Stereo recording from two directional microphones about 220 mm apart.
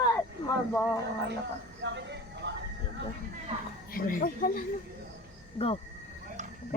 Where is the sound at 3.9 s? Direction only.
40° left (ahead or behind).